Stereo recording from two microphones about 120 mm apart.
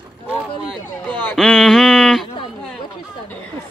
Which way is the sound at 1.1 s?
10° left (ahead or behind).